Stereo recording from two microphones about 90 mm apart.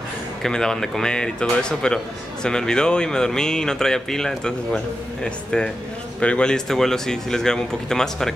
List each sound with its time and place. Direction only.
0.4 s speech: 5° left (ahead or behind)